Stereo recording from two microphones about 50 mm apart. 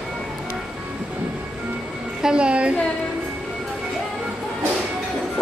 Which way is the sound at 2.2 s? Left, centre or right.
Centre.